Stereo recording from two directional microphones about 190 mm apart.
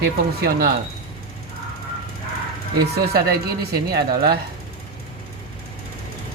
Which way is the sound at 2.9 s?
55° right (ahead or behind).